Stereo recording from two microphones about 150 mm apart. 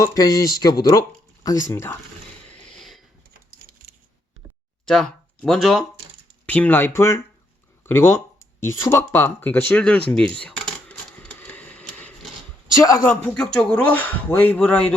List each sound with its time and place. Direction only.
0.0 s speech: 25° left (ahead or behind)
1.7 s speech: 15° left (ahead or behind)
2.5 s a sound: 5° left (ahead or behind)
4.9 s speech: 5° left (ahead or behind)
10.1 s a sound: 5° left (ahead or behind)
12.7 s speech: 20° left (ahead or behind)
13.1 s speech: 10° left (ahead or behind)